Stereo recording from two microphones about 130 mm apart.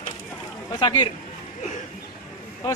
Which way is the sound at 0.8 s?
30° left (ahead or behind).